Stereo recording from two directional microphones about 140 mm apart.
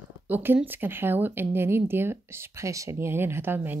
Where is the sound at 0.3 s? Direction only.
15° right (ahead or behind).